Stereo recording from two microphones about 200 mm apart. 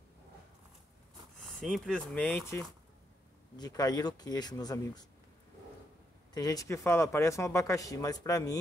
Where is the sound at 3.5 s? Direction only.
20° left (ahead or behind).